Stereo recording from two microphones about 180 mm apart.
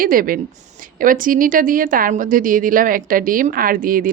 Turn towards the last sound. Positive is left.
turn(degrees=-50)  # may be behind; listen again after turning